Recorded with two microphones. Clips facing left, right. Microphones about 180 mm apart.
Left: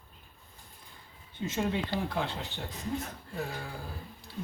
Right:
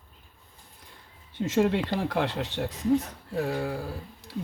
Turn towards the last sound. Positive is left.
turn(degrees=-80)